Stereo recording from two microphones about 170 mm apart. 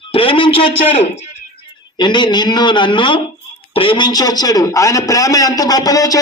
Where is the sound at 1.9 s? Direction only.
25° left (ahead or behind).